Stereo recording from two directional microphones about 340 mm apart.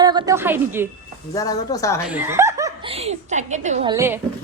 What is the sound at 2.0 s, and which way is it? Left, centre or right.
Speech, centre.